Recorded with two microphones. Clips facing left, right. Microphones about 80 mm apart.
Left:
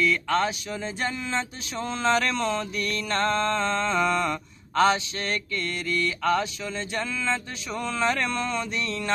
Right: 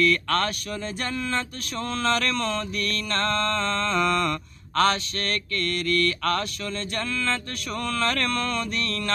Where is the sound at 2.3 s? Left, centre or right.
Left.